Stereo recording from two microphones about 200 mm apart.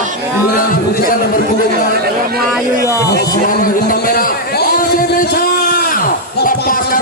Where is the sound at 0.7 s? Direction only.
45° left (ahead or behind).